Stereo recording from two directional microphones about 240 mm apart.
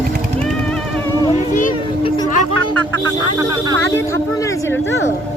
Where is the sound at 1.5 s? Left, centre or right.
Left.